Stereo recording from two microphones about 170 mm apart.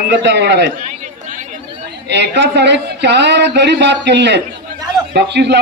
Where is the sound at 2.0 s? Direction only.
90° right.